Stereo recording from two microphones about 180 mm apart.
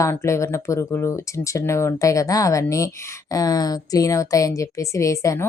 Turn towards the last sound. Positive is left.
turn(degrees=15)  # may be behind; listen again after turning